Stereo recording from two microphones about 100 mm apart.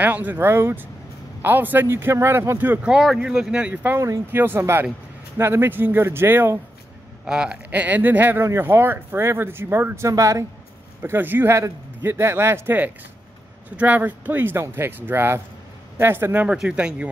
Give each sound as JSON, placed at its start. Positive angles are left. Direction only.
{"t": 0.0, "sound": "speech", "side_deg": -15}
{"t": 2.9, "sound": "speech", "side_deg": -5}
{"t": 7.2, "sound": "speech", "side_deg": -10}
{"t": 11.0, "sound": "speech", "side_deg": -20}
{"t": 16.4, "sound": "speech", "side_deg": -10}